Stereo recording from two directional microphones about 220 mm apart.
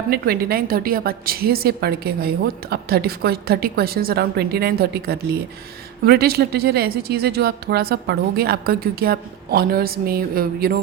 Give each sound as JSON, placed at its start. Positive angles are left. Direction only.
{"t": 0.1, "sound": "a woman's voice", "side_deg": -45}